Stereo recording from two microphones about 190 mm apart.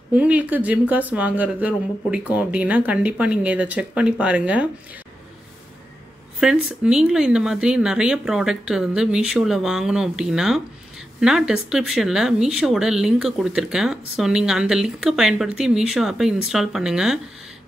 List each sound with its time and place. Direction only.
0.1 s speech: 5° right (ahead or behind)
6.4 s speech: 5° right (ahead or behind)